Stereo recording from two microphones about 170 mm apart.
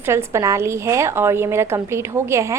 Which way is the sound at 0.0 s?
15° right (ahead or behind).